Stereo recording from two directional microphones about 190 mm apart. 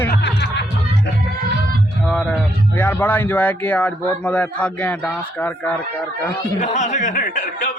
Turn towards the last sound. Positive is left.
turn(degrees=45)  # may be behind; listen again after turning